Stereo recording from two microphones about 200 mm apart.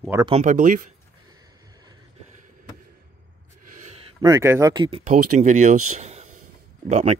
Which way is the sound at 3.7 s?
35° right (ahead or behind).